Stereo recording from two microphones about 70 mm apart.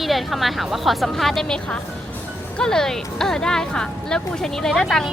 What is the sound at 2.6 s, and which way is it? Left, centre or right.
Speech, centre.